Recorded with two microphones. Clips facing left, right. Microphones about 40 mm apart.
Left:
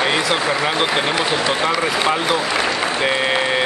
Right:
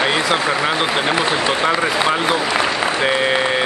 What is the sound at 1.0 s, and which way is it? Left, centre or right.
Speech, centre.